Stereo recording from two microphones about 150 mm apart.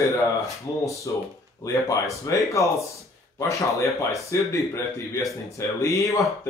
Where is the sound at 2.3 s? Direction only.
20° left (ahead or behind).